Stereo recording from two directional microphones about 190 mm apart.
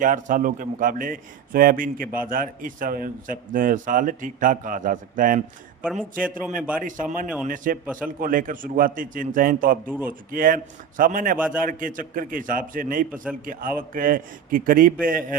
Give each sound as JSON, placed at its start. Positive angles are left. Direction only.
{"t": 0.0, "sound": "a man's voice", "side_deg": -45}
{"t": 5.8, "sound": "a man's voice", "side_deg": -5}
{"t": 6.8, "sound": "a man's voice", "side_deg": -45}
{"t": 9.8, "sound": "a man's voice", "side_deg": -10}
{"t": 10.1, "sound": "a man's voice", "side_deg": -45}
{"t": 11.3, "sound": "a man's voice", "side_deg": -5}
{"t": 11.6, "sound": "a man's voice", "side_deg": -45}